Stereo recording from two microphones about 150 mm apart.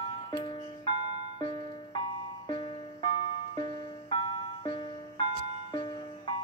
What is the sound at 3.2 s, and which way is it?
Music, 35° left (ahead or behind).